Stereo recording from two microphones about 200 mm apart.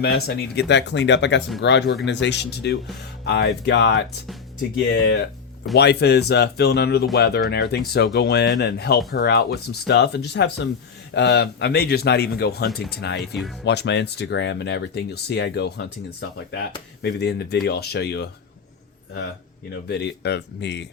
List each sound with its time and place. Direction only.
0.0 s speech: 50° left (ahead or behind)
5.7 s speech: 55° left (ahead or behind)
13.3 s speech: centre (ahead or behind)
13.7 s speech: 60° left (ahead or behind)
17.0 s speech: 55° left (ahead or behind)
19.9 s speech: 55° left (ahead or behind)